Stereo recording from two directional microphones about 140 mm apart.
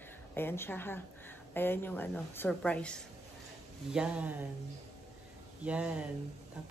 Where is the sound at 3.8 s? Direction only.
5° right (ahead or behind).